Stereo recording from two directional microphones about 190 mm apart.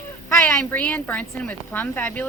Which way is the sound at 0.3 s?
10° left (ahead or behind).